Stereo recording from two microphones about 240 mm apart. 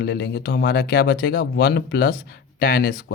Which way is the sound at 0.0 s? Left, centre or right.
Left.